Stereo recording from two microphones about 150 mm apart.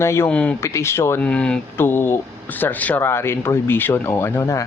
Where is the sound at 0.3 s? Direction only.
5° left (ahead or behind).